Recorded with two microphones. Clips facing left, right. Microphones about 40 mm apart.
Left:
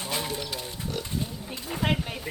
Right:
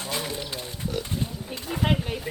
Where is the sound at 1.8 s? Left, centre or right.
Centre.